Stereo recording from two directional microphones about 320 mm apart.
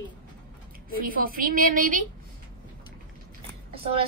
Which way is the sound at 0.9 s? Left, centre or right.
Right.